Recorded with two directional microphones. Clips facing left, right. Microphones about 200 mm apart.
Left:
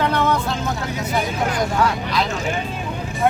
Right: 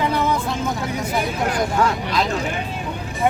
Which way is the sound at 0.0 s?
5° right (ahead or behind).